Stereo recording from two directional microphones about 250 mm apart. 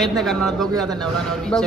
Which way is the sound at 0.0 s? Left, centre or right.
Centre.